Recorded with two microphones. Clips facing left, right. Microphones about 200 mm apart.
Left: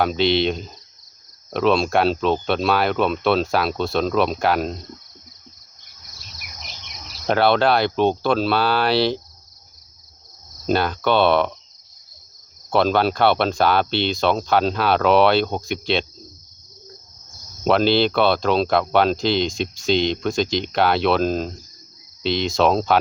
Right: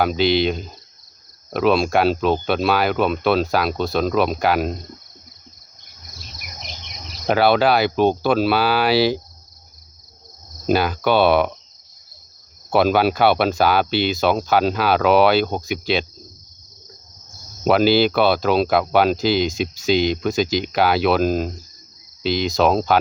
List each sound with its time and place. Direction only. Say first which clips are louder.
0.0 s speech: right 1 dB; centre (ahead or behind)
7.3 s speech: right 1 dB; 5° right (ahead or behind)
10.7 s speech: right 2 dB; 5° right (ahead or behind)
12.7 s speech: right 2 dB; 10° right (ahead or behind)
17.6 s speech: right 2 dB; 5° right (ahead or behind)